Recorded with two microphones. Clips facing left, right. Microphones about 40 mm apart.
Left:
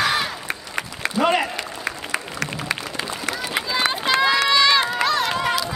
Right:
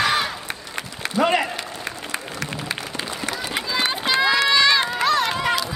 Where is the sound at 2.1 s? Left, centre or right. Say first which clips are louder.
Left 2 dB; left.